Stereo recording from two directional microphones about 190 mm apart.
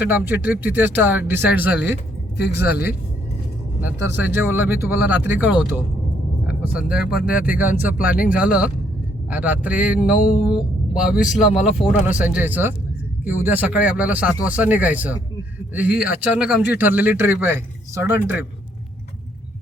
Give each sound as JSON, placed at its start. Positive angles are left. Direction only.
{"t": 0.0, "sound": "a man's voice", "side_deg": -10}
{"t": 2.4, "sound": "speech", "side_deg": 60}
{"t": 3.8, "sound": "a man's voice", "side_deg": -10}